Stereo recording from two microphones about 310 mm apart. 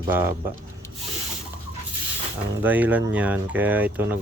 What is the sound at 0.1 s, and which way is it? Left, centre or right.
Speech, centre.